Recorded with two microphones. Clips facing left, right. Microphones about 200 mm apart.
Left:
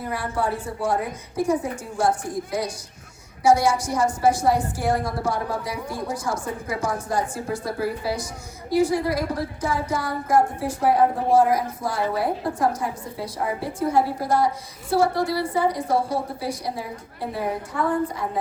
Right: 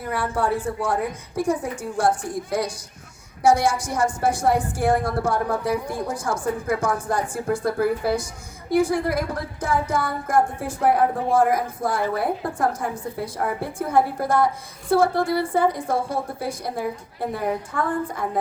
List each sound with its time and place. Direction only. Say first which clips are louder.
0.1 s a woman's voice: right 3 dB; 50° right (ahead or behind)